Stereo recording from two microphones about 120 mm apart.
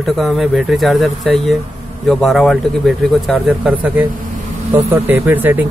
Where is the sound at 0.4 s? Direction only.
Centre (ahead or behind).